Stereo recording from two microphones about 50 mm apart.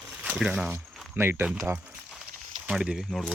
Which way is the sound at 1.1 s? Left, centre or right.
Right.